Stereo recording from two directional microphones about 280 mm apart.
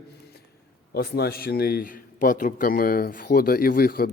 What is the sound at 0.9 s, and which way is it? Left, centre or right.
A man's voice, left.